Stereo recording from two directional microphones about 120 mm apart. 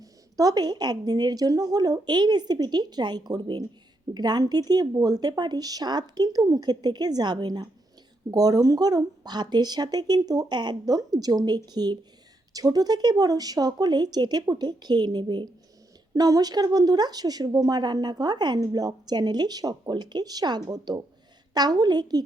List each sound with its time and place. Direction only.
0.0 s speech: 30° right (ahead or behind)